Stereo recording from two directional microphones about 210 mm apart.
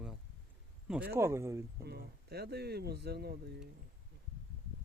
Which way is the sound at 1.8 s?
50° right (ahead or behind).